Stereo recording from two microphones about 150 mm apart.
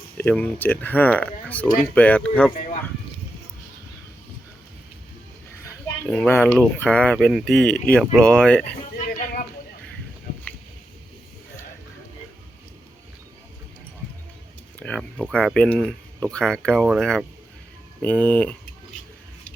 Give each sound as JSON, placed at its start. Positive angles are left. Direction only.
{"t": 0.2, "sound": "speech", "side_deg": 10}
{"t": 6.1, "sound": "speech", "side_deg": 10}
{"t": 9.0, "sound": "a sound", "side_deg": 70}
{"t": 14.8, "sound": "speech", "side_deg": 10}